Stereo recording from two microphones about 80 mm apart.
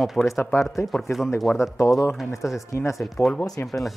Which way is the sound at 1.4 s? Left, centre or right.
Centre.